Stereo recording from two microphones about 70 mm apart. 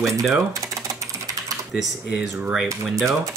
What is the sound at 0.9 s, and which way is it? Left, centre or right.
Typing, right.